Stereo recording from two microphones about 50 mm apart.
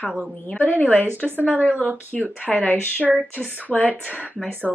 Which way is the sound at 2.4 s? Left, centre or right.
Left.